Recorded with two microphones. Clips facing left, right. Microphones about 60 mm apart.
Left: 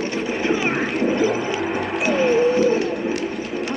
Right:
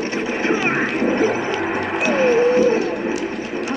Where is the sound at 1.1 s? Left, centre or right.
Right.